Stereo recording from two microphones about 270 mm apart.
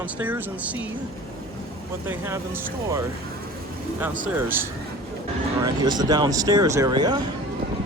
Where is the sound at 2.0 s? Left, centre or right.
Centre.